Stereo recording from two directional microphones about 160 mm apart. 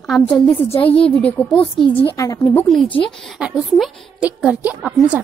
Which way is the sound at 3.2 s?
5° right (ahead or behind).